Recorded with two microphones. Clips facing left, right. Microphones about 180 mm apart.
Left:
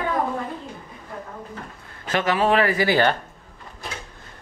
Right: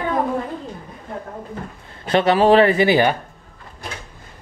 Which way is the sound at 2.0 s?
35° right (ahead or behind).